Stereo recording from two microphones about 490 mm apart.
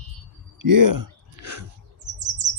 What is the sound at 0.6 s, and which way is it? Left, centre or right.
Speech, right.